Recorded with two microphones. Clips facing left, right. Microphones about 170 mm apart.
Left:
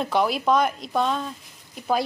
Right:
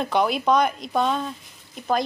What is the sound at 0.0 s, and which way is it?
A woman's voice, centre (ahead or behind).